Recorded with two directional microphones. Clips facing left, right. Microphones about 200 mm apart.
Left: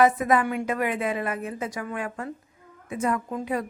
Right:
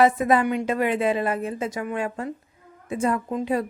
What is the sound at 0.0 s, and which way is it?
A woman's voice, 30° right (ahead or behind).